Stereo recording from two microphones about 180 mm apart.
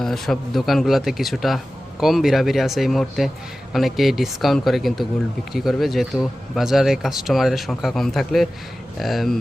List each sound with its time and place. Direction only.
0.0 s speech: centre (ahead or behind)